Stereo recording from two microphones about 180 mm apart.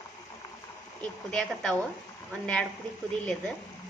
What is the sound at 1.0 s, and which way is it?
A woman's voice, 5° left (ahead or behind).